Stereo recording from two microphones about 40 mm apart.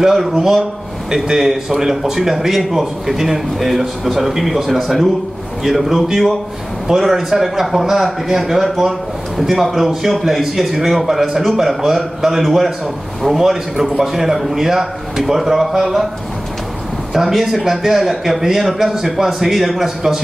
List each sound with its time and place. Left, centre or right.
0.0 s a man's voice: centre
17.1 s a man's voice: centre